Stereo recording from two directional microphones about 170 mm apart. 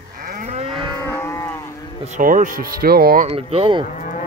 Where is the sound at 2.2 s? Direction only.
50° right (ahead or behind).